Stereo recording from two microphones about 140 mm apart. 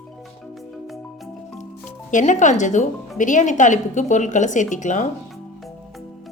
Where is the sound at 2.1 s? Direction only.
60° left (ahead or behind).